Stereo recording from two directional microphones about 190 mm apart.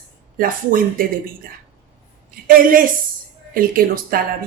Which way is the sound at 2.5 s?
50° right (ahead or behind).